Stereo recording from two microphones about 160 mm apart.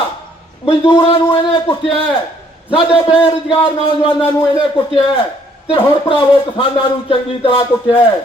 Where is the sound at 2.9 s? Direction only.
35° left (ahead or behind).